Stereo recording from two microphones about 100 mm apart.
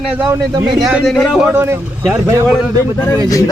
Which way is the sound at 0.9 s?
Centre (ahead or behind).